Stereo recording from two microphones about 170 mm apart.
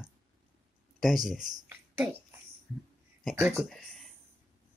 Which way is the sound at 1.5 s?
10° right (ahead or behind).